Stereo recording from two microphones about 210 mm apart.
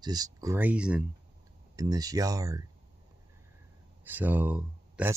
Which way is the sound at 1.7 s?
15° right (ahead or behind).